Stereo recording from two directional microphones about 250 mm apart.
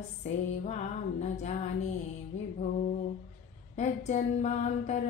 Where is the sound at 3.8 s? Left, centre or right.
Left.